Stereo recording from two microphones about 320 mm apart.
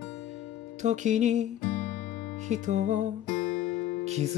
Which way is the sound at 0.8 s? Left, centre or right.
Right.